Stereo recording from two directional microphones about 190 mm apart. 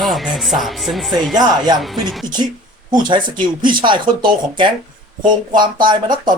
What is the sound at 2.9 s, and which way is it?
Speech, 25° right (ahead or behind).